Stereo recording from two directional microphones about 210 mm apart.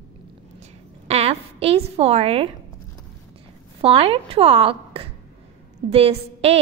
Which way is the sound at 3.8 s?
25° right (ahead or behind).